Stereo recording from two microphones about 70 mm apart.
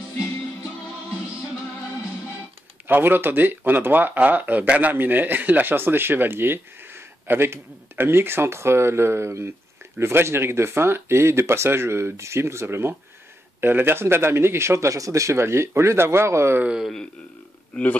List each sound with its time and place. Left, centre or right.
2.9 s speech: right
16.8 s speech: centre